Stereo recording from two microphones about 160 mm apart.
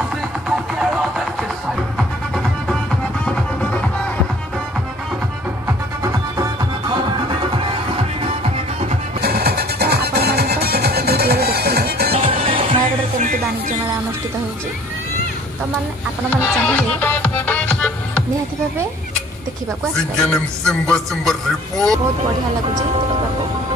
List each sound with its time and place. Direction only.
0.5 s music: 5° right (ahead or behind)
6.3 s music: 25° right (ahead or behind)
9.2 s music: 80° right
12.1 s music: 40° right (ahead or behind)
16.6 s music: 10° left (ahead or behind)
20.2 s a man's voice: 5° left (ahead or behind)